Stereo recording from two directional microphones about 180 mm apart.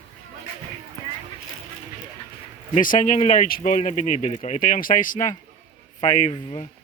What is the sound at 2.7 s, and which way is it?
Speech, 45° left (ahead or behind).